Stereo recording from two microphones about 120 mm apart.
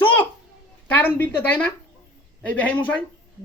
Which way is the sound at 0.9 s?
15° left (ahead or behind).